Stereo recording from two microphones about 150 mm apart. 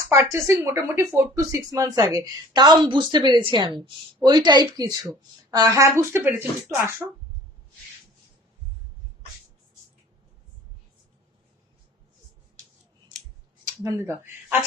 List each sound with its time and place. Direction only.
0.1 s speech: 20° right (ahead or behind)
13.7 s speech: 20° right (ahead or behind)